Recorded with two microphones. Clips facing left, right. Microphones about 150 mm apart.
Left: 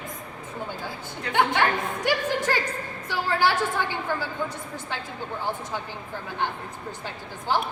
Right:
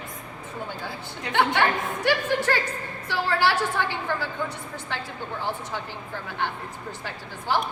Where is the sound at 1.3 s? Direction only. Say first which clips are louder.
Even; 15° left (ahead or behind).